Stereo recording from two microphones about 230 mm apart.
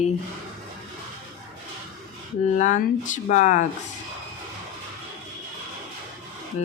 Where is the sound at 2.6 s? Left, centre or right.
Left.